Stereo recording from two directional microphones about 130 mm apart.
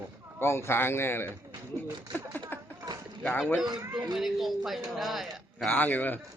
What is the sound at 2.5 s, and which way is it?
Clip-clop, 15° left (ahead or behind).